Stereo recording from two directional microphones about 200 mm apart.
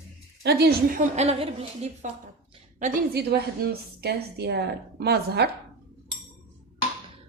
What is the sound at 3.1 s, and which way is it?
A woman's voice, 55° right (ahead or behind).